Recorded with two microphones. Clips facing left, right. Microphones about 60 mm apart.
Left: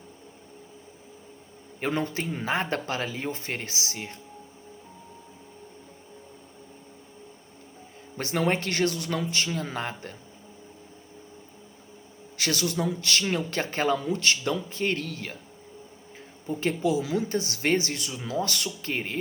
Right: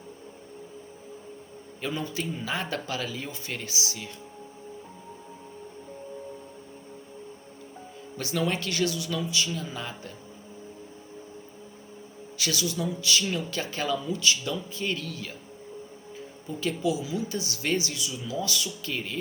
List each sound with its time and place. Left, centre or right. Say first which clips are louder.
1.8 s speech: left 3 dB; left
8.1 s speech: left 3 dB; left
12.4 s speech: left 2 dB; left
16.5 s speech: left 2 dB; left